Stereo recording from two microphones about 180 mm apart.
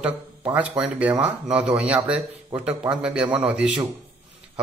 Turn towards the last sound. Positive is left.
turn(degrees=-10)  # may be behind; listen again after turning